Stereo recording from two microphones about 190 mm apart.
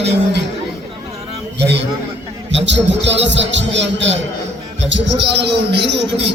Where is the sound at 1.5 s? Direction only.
65° right (ahead or behind).